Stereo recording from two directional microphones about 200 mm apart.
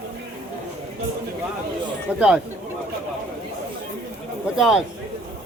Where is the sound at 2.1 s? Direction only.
5° right (ahead or behind).